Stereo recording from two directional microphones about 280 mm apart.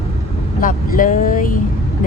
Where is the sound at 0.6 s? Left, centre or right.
Left.